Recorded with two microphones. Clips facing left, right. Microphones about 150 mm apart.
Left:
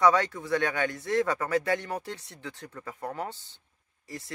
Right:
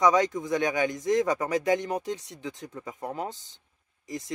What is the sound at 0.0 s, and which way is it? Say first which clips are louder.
Speech: right 1 dB; 15° right (ahead or behind).